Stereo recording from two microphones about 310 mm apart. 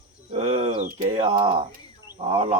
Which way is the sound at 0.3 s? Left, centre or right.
Centre.